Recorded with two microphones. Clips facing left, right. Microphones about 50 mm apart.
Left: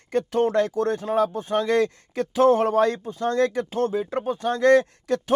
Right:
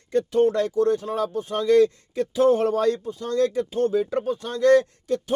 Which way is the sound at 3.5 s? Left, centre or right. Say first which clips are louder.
Right 1 dB; left.